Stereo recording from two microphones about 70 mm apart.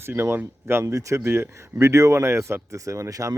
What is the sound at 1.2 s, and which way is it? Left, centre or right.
Speech, right.